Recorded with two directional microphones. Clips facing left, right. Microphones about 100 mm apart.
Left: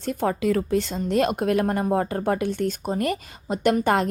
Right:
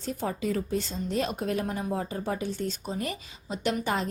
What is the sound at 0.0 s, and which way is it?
Speech, 65° left (ahead or behind).